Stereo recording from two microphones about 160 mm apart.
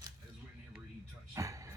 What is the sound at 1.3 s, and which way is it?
Music, 20° right (ahead or behind).